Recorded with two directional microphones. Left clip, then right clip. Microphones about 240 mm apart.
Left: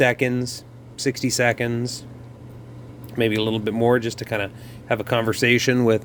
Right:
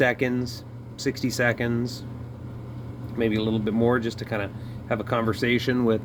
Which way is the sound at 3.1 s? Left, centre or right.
Left.